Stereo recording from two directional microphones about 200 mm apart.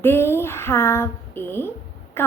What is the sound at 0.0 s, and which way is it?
A woman's voice, 10° left (ahead or behind).